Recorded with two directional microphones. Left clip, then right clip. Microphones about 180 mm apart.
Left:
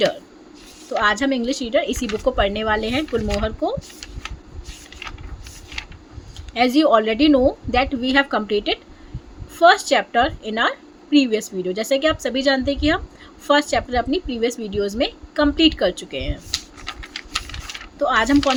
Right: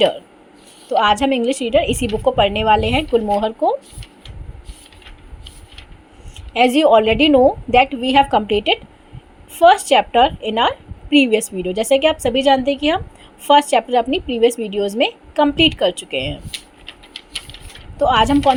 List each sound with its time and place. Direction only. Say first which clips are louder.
0.9 s a woman's voice: right 4 dB; 15° right (ahead or behind)
6.5 s a woman's voice: right 4 dB; 15° right (ahead or behind)
18.0 s a woman's voice: right 4 dB; 15° right (ahead or behind)